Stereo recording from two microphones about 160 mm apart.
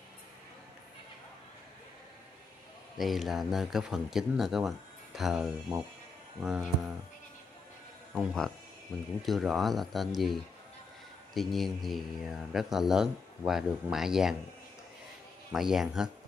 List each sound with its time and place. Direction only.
3.0 s speech: centre (ahead or behind)
5.7 s speech: 25° right (ahead or behind)
6.4 s speech: 5° right (ahead or behind)
8.1 s speech: centre (ahead or behind)
15.5 s speech: centre (ahead or behind)